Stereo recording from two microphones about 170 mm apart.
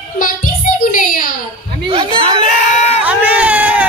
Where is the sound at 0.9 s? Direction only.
50° left (ahead or behind).